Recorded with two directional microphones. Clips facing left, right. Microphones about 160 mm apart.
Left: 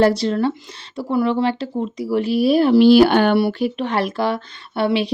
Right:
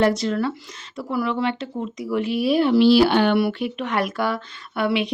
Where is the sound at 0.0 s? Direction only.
30° left (ahead or behind); by 3.3 s 50° left (ahead or behind).